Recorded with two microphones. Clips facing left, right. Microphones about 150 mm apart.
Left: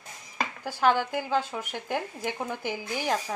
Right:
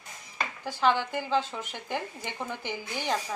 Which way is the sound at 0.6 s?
10° left (ahead or behind).